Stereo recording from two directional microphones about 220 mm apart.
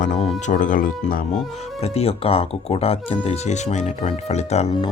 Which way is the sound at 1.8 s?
25° left (ahead or behind).